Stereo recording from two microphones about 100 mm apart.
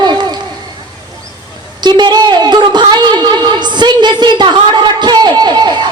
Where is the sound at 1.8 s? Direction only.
45° right (ahead or behind).